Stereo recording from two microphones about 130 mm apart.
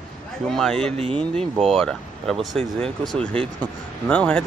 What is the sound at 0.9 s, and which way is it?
Speech, 55° right (ahead or behind).